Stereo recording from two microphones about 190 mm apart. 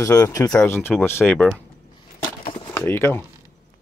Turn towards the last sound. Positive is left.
turn(degrees=10)  # may be behind; listen again after turning